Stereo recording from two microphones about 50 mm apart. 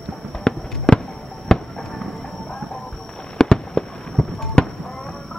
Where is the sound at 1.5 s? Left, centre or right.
Centre.